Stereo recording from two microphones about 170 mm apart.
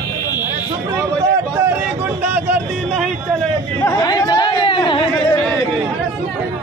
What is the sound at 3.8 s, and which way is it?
Chatter, 20° left (ahead or behind).